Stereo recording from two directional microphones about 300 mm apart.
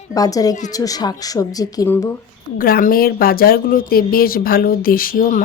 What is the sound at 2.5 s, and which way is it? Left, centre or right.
Speech, left.